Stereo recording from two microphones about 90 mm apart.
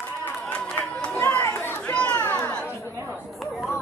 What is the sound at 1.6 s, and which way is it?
Chatter, 20° left (ahead or behind).